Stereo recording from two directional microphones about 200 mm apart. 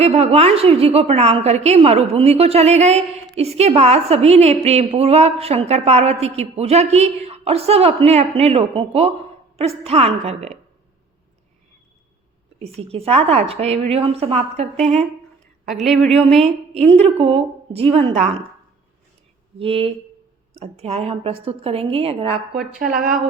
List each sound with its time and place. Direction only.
0.0 s a woman's voice: 30° right (ahead or behind)
12.5 s a woman's voice: 30° right (ahead or behind)
15.6 s speech: centre (ahead or behind)
16.7 s a woman's voice: 30° right (ahead or behind)
19.5 s a woman's voice: 30° right (ahead or behind)
23.0 s a woman's voice: 45° right (ahead or behind)